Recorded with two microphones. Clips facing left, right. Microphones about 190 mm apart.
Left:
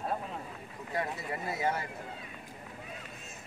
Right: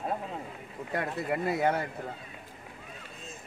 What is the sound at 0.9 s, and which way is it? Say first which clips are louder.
Speech: right 4 dB; 60° right (ahead or behind).